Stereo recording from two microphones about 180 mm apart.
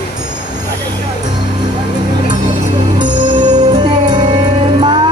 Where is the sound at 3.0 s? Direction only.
25° right (ahead or behind).